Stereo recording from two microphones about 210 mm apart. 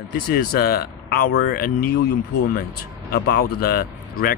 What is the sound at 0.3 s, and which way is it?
A man's voice, 45° left (ahead or behind).